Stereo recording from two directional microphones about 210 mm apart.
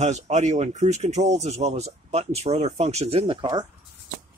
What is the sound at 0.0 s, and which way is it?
Speech, 35° right (ahead or behind).